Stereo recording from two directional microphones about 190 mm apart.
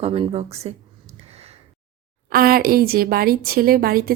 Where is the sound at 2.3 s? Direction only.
50° right (ahead or behind).